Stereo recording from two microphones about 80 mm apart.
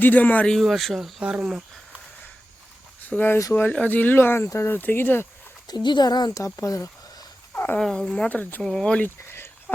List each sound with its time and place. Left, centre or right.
0.0 s speech: left
0.5 s speech: centre
1.2 s speech: centre
3.0 s speech: left
5.6 s speech: left
6.4 s speech: left
7.5 s dog: left
7.8 s speech: centre
8.4 s speech: left
8.6 s speech: centre
9.0 s a sound: left
9.7 s a sound: centre